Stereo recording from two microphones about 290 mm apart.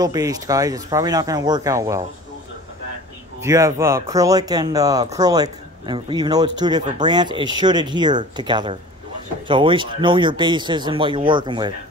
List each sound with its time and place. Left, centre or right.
0.0 s speech: centre
3.3 s speech: centre